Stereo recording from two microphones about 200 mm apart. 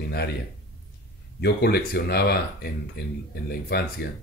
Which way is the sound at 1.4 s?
55° left (ahead or behind).